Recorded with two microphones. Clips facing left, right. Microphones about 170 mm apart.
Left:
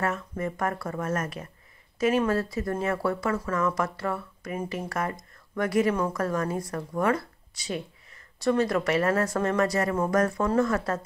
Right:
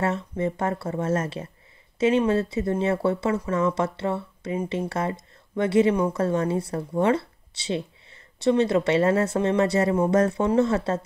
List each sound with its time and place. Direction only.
0.0 s speech: 25° right (ahead or behind)